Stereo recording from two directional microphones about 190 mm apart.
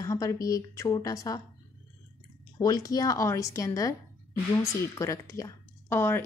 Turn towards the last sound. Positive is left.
turn(degrees=10)  # may be behind; listen again after turning